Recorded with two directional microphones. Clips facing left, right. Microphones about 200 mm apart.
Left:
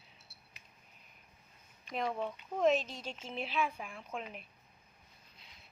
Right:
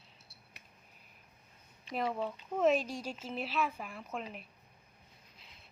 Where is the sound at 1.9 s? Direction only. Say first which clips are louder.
Right 1 dB; 5° right (ahead or behind).